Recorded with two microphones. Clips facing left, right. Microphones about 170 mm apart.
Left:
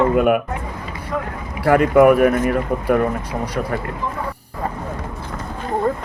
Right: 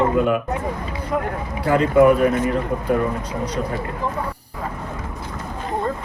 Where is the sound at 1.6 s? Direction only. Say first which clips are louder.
Left 2 dB; 70° left (ahead or behind).